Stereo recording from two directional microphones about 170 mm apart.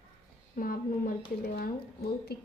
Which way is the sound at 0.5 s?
55° left (ahead or behind).